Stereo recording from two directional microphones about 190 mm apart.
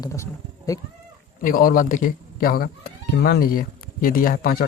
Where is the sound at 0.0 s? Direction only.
15° left (ahead or behind).